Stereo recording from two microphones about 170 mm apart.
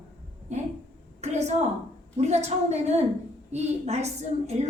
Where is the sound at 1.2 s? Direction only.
40° right (ahead or behind).